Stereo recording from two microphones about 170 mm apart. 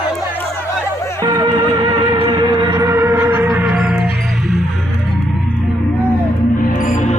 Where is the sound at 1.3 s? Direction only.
25° right (ahead or behind); by 4.0 s 5° right (ahead or behind).